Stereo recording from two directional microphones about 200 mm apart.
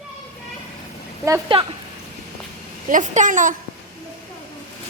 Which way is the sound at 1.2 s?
15° right (ahead or behind).